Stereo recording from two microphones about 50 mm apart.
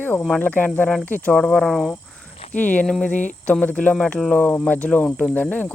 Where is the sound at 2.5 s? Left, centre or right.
Left.